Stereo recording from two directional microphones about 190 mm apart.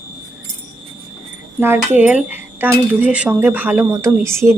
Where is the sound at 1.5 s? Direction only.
10° right (ahead or behind).